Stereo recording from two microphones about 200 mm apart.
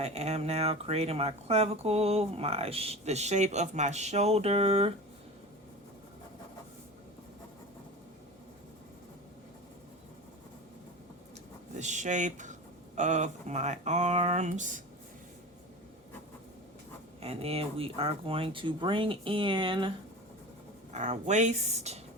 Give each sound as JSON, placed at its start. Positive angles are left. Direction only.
{"t": 0.0, "sound": "speech", "side_deg": -30}
{"t": 11.7, "sound": "a sound", "side_deg": -35}
{"t": 13.0, "sound": "speech", "side_deg": -35}
{"t": 17.2, "sound": "speech", "side_deg": -30}
{"t": 20.9, "sound": "speech", "side_deg": -35}